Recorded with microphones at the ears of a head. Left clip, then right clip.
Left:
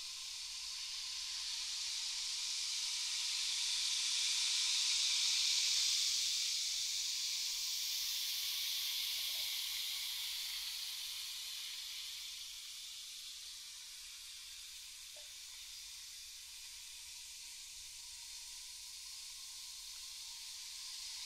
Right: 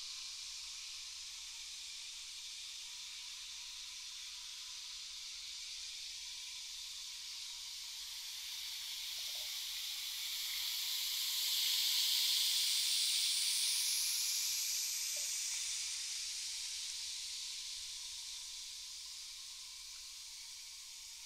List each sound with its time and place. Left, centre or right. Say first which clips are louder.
1.9 s hiss: left 7 dB; left
10.9 s snake: right 6 dB; right